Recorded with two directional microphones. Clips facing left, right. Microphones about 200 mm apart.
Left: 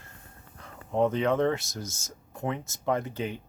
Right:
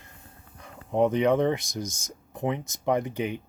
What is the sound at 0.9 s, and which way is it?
Speech, 15° right (ahead or behind).